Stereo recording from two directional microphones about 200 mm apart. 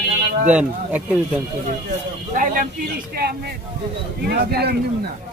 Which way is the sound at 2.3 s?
40° right (ahead or behind).